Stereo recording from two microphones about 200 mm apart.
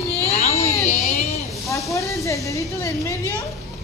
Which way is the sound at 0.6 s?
15° left (ahead or behind).